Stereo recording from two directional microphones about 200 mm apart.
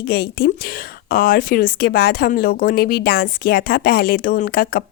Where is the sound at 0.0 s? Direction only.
50° left (ahead or behind).